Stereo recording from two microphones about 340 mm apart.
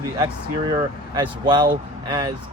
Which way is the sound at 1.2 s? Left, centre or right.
Centre.